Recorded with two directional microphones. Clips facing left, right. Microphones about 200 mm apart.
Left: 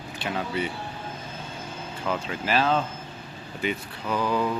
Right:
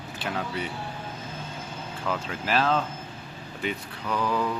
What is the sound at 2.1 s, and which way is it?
Speech, centre (ahead or behind).